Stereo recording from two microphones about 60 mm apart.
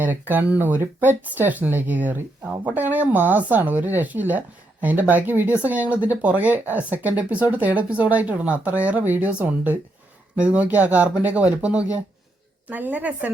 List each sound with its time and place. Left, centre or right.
0.0 s speech: right
12.6 s speech: right